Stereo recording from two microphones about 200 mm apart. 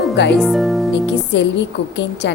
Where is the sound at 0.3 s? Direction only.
Centre (ahead or behind).